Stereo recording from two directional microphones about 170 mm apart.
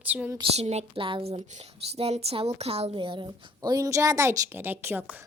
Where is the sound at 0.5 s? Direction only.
40° right (ahead or behind); by 5.2 s 10° right (ahead or behind).